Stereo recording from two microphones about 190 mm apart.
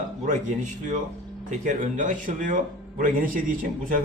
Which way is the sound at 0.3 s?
40° right (ahead or behind).